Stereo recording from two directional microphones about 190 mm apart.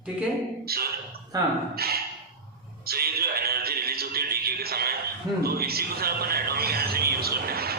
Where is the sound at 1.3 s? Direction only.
20° right (ahead or behind).